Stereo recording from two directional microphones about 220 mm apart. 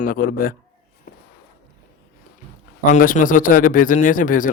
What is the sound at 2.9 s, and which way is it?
Speech, 35° left (ahead or behind).